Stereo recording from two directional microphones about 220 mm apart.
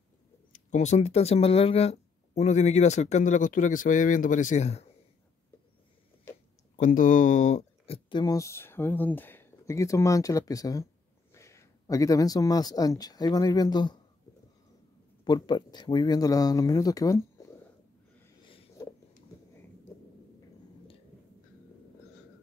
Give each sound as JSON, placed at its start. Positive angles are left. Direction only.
{"t": 0.5, "sound": "speech", "side_deg": 35}
{"t": 6.8, "sound": "speech", "side_deg": 35}
{"t": 15.2, "sound": "speech", "side_deg": 20}
{"t": 18.4, "sound": "a sound", "side_deg": 20}